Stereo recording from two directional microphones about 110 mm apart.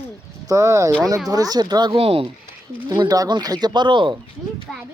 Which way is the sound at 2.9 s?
35° right (ahead or behind).